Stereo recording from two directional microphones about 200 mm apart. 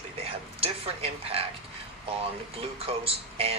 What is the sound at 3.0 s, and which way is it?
Speech, 30° right (ahead or behind).